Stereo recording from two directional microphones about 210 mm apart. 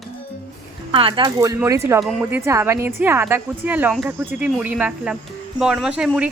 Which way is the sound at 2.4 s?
15° right (ahead or behind).